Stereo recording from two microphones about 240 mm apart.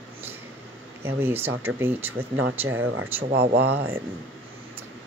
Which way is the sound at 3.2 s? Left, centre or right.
Right.